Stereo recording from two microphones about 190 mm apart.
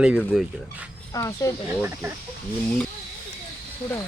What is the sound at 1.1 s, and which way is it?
Speech, 15° left (ahead or behind).